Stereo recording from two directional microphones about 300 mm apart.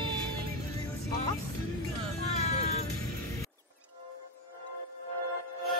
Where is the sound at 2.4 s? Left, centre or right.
Left.